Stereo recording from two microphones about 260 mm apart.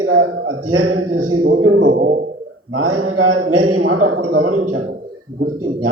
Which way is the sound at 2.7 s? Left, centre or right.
Right.